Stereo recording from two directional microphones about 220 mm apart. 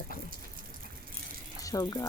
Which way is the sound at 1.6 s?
15° left (ahead or behind).